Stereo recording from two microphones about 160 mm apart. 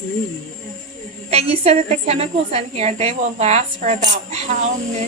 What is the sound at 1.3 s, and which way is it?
A woman's voice, 40° right (ahead or behind).